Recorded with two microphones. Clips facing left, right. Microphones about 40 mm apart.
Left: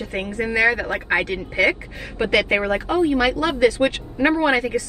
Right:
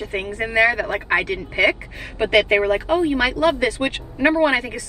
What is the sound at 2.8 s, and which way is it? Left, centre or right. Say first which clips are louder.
A woman's voice: even; right.